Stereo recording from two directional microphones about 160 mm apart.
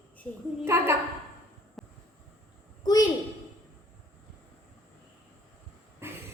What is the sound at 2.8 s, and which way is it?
Speech, 25° left (ahead or behind).